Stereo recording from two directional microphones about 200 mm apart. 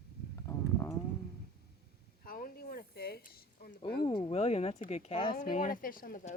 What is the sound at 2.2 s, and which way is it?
Speech, 45° left (ahead or behind).